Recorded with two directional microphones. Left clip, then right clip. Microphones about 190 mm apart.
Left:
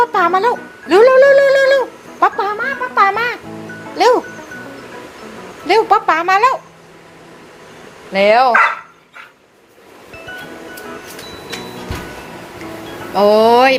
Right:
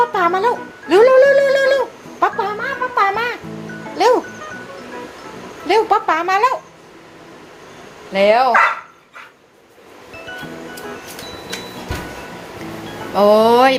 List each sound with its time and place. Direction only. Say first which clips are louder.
0.0 s gargling: left 2 dB; 15° left (ahead or behind)
2.2 s a sound: left 3 dB; 20° left (ahead or behind)
3.9 s speech: left 2 dB; 10° left (ahead or behind)
5.6 s speech: left 3 dB; 15° left (ahead or behind)
8.1 s speech: left 2 dB; 15° left (ahead or behind)
13.1 s speech: left 1 dB; 10° right (ahead or behind)